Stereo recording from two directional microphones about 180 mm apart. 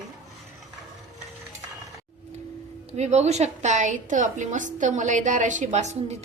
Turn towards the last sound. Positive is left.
turn(degrees=-40)  # may be behind; listen again after turning